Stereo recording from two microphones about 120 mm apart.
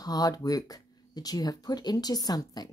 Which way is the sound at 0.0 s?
30° left (ahead or behind).